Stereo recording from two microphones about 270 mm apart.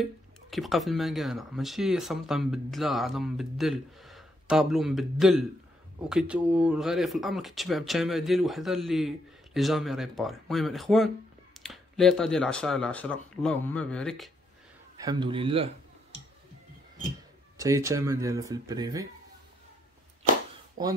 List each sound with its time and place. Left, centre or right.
0.0 s speech: centre
15.0 s a man's voice: centre
17.6 s speech: centre
20.8 s speech: centre